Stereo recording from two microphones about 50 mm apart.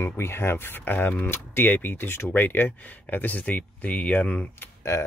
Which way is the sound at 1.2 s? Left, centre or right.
Left.